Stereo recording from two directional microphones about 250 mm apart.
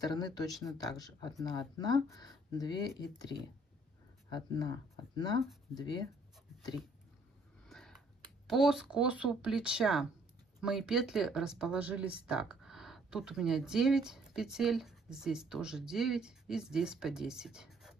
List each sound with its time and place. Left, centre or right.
0.0 s speech: centre
4.3 s speech: centre
7.6 s a sound: centre
8.5 s speech: centre